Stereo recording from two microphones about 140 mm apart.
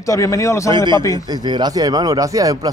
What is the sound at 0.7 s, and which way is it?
A man's voice, 30° right (ahead or behind).